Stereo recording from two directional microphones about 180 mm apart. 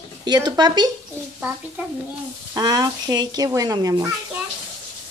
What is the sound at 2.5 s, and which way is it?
Speech, 20° right (ahead or behind).